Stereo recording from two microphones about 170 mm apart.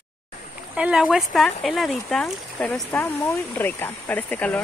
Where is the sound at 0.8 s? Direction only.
5° right (ahead or behind).